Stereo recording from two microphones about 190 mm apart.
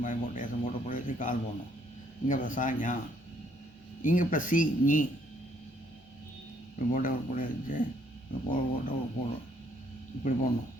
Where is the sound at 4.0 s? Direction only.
45° left (ahead or behind).